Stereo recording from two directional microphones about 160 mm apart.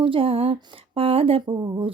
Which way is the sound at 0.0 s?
35° right (ahead or behind).